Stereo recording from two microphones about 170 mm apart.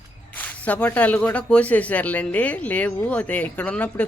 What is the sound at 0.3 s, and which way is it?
Speech, 10° left (ahead or behind).